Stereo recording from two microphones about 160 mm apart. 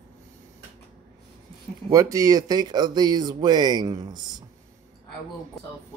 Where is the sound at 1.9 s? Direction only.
20° right (ahead or behind).